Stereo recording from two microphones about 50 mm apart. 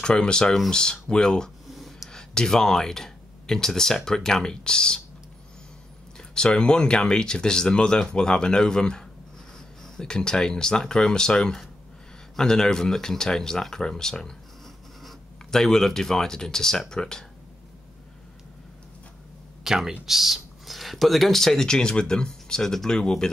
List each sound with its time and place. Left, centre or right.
0.0 s speech: centre
1.7 s a sound: centre
2.0 s speech: centre
6.1 s speech: centre
19.6 s speech: centre